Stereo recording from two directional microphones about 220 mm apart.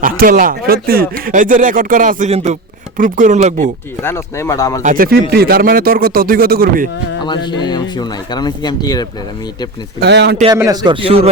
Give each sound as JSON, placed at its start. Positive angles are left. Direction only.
{"t": 0.0, "sound": "speech", "side_deg": -40}
{"t": 4.0, "sound": "speech", "side_deg": 10}
{"t": 4.8, "sound": "speech", "side_deg": -35}
{"t": 7.3, "sound": "speech", "side_deg": 20}
{"t": 10.0, "sound": "a man's voice", "side_deg": -50}
{"t": 10.5, "sound": "a man's voice", "side_deg": -15}